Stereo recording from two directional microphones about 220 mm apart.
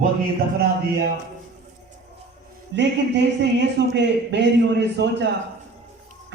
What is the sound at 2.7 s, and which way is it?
A man's voice, 55° right (ahead or behind).